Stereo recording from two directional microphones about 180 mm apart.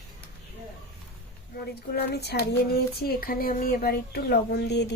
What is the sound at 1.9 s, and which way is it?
Child singing, 65° left (ahead or behind).